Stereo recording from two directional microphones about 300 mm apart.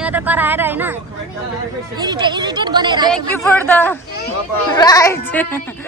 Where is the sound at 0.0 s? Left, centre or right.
Centre.